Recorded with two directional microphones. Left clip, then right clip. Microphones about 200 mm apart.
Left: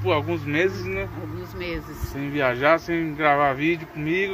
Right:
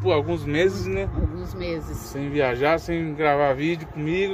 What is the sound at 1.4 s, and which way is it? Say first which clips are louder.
Speech: even; 20° right (ahead or behind).